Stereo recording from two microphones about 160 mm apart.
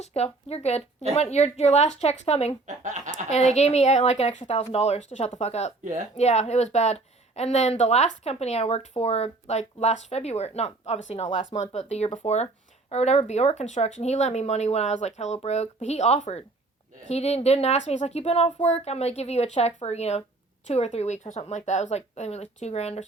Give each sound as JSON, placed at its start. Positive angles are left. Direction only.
{"t": 0.0, "sound": "a woman's voice", "side_deg": 40}
{"t": 2.6, "sound": "a sound", "side_deg": -50}
{"t": 3.2, "sound": "a woman's voice", "side_deg": 45}